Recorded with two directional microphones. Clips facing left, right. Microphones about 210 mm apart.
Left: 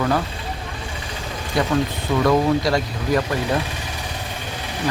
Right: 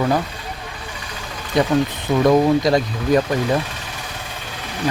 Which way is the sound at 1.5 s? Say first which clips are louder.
Right 3 dB; 20° right (ahead or behind).